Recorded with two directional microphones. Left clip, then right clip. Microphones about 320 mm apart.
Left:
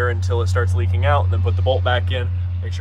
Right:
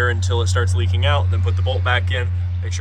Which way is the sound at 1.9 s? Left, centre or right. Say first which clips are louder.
Right 1 dB; centre.